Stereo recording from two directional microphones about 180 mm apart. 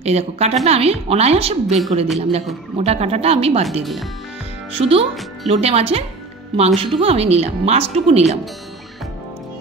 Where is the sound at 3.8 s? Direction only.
Centre (ahead or behind).